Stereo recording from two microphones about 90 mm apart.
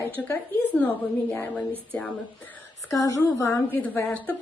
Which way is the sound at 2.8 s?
40° left (ahead or behind).